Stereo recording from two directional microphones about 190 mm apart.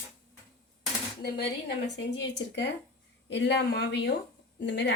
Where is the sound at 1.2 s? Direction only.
60° left (ahead or behind).